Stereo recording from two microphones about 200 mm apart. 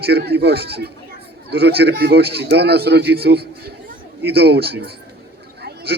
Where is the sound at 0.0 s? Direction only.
50° right (ahead or behind).